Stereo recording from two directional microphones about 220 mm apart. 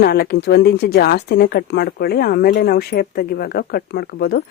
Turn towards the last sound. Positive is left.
turn(degrees=50)  # may be behind; listen again after turning